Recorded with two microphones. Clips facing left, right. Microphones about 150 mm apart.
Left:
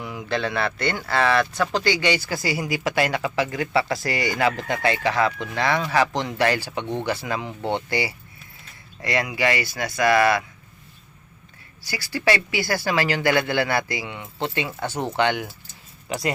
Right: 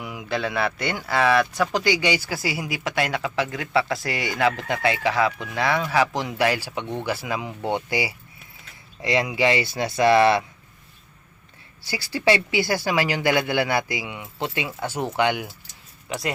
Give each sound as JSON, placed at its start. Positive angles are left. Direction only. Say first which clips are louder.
{"t": 0.0, "sound": "speech", "louder": "left 1 dB", "side_deg": -10}
{"t": 11.9, "sound": "speech", "louder": "right 1 dB", "side_deg": -20}